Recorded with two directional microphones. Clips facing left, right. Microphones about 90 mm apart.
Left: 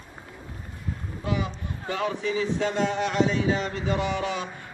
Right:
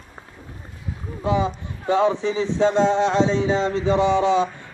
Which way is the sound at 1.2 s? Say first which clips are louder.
Right 8 dB; 25° right (ahead or behind).